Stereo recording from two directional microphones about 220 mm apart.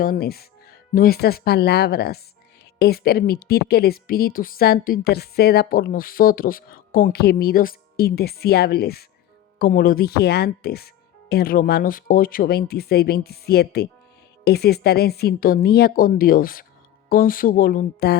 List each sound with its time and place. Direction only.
0.0 s a woman's voice: 40° left (ahead or behind)